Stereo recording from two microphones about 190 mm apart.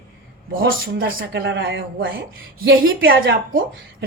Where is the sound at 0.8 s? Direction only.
55° right (ahead or behind); by 3.4 s 70° right (ahead or behind).